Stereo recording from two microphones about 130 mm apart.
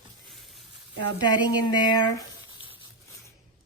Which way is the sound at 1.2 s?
35° left (ahead or behind).